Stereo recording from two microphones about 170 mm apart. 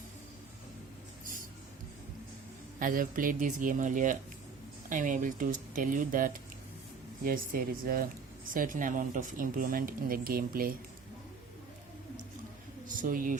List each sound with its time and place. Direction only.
1.2 s a sound: 55° right (ahead or behind)
2.7 s speech: 55° right (ahead or behind)
13.0 s speech: 55° right (ahead or behind)